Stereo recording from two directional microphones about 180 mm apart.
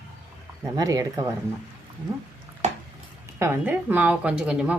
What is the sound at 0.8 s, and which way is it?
Speech, 20° right (ahead or behind).